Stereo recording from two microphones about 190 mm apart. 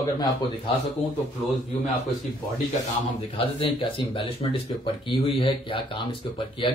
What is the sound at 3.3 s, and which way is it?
Speech, 30° left (ahead or behind).